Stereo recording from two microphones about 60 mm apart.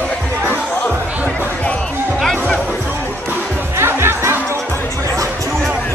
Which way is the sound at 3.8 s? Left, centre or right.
Right.